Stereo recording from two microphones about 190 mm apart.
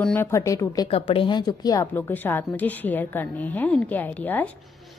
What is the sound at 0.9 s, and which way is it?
A woman's voice, 30° left (ahead or behind).